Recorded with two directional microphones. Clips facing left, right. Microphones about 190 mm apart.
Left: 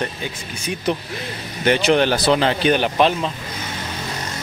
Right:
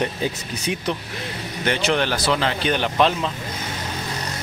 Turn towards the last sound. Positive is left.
turn(degrees=5)  # may be behind; listen again after turning